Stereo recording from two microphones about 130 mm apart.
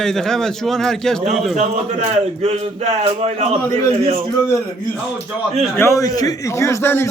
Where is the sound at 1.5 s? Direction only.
60° right (ahead or behind).